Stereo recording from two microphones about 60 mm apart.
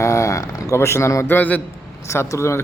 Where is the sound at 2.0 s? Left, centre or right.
Left.